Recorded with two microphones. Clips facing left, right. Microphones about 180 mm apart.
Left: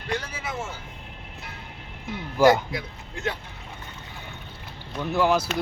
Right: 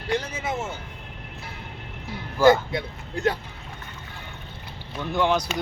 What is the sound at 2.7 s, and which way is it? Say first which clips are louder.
Speech: right 4 dB; 35° right (ahead or behind).